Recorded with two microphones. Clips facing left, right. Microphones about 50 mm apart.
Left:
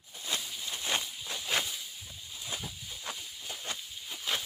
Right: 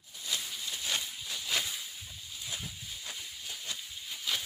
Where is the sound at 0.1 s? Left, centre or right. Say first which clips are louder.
Left 1 dB; left.